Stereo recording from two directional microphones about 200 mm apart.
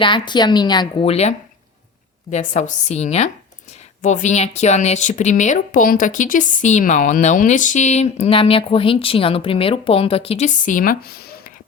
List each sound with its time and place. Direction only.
0.0 s a woman's voice: 25° left (ahead or behind)
2.3 s a woman's voice: 40° left (ahead or behind)